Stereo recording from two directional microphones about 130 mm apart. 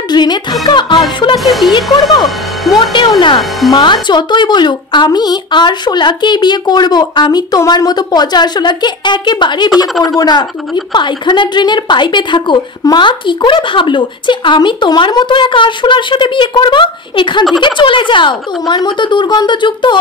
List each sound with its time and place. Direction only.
0.1 s a woman's voice: 35° left (ahead or behind)
1.4 s speech: centre (ahead or behind)
2.9 s a woman's voice: 35° left (ahead or behind)